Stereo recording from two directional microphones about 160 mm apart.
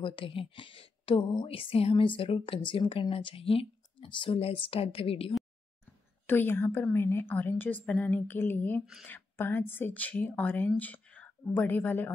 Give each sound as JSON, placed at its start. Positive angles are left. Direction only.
{"t": 0.0, "sound": "a woman's voice", "side_deg": 35}
{"t": 6.2, "sound": "a woman's voice", "side_deg": 10}